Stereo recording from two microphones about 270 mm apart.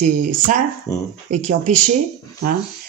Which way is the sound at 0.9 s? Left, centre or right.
Centre.